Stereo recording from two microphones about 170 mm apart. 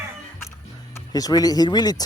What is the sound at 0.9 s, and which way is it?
Speech, 20° left (ahead or behind).